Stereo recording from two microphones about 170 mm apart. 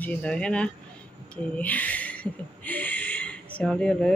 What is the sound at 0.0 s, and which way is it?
Speech, 10° left (ahead or behind).